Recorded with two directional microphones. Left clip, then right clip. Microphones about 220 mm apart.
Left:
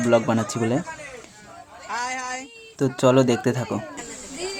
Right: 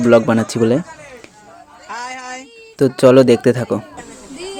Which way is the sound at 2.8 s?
30° right (ahead or behind).